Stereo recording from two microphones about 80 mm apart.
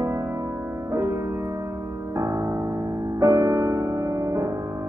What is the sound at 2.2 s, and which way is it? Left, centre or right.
Music, right.